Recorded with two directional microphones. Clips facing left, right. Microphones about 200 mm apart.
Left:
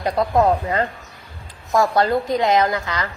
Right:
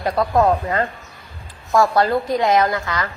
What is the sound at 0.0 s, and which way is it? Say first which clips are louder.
Speech: even; 20° left (ahead or behind).